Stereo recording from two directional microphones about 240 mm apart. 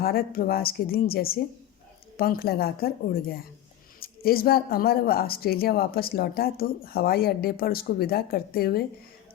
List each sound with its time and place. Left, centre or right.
0.0 s speech: left